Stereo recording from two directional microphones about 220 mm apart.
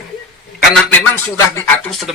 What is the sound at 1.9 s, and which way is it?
Speech, centre (ahead or behind).